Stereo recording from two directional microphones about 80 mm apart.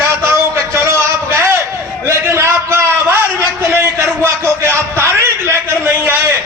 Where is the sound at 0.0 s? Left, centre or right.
Right.